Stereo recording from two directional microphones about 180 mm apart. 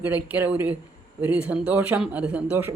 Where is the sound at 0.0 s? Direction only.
10° right (ahead or behind).